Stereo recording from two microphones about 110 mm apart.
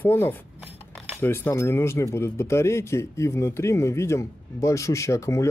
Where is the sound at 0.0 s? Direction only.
20° left (ahead or behind).